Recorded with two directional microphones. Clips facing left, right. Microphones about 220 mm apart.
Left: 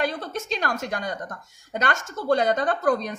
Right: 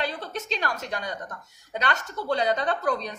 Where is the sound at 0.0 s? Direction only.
50° left (ahead or behind).